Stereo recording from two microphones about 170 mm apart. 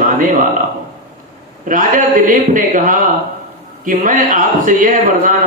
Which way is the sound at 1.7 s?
50° right (ahead or behind).